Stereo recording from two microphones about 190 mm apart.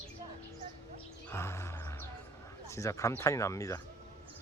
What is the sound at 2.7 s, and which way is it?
Speech, 15° left (ahead or behind).